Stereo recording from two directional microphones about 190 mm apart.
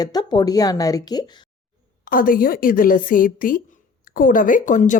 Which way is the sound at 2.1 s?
45° left (ahead or behind).